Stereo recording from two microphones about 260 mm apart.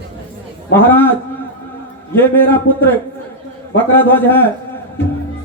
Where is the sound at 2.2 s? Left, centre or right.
Centre.